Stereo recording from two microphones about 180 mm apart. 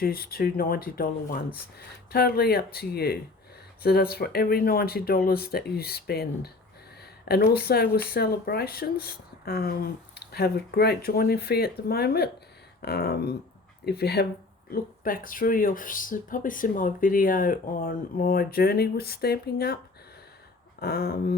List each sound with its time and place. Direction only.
0.0 s speech: 55° left (ahead or behind)
14.7 s speech: 50° left (ahead or behind)
20.8 s speech: 60° left (ahead or behind)